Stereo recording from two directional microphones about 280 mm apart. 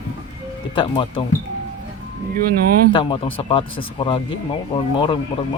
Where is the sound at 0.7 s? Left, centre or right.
Centre.